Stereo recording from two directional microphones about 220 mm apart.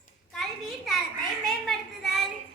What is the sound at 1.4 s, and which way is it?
Children playing, centre (ahead or behind).